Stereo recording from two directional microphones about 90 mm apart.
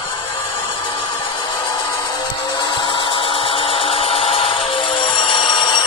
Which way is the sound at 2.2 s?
55° left (ahead or behind).